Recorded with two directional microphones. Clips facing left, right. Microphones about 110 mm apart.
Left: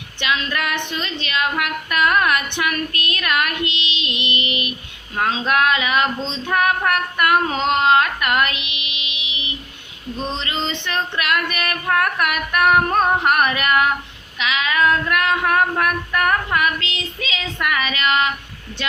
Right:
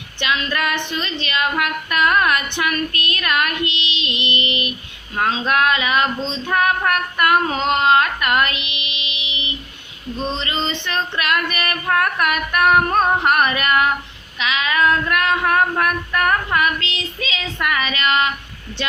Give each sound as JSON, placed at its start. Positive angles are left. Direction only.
{"t": 0.9, "sound": "child singing", "side_deg": 15}
{"t": 7.8, "sound": "carnatic music", "side_deg": 10}
{"t": 8.2, "sound": "a sound", "side_deg": 15}
{"t": 10.2, "sound": "female singing", "side_deg": 15}
{"t": 12.9, "sound": "music", "side_deg": -10}
{"t": 13.2, "sound": "child singing", "side_deg": 10}